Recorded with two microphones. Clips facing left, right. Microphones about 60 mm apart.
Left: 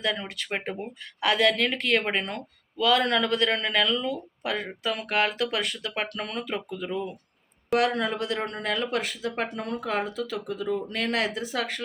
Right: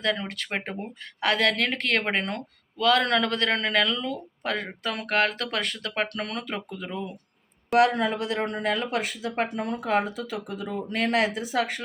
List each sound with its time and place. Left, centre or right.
0.0 s speech: right
7.7 s speech: centre